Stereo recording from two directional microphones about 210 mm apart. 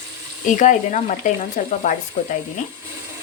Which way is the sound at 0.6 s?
35° left (ahead or behind).